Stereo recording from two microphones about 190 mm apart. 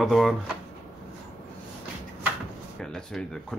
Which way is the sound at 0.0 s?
Centre (ahead or behind).